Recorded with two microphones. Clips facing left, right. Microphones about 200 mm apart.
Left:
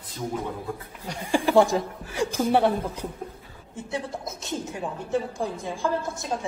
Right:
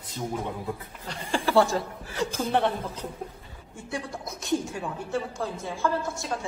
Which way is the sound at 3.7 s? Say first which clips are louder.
Left 3 dB; 20° left (ahead or behind).